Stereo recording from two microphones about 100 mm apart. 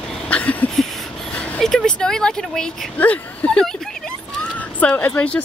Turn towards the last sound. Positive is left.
turn(degrees=15)  # may be behind; listen again after turning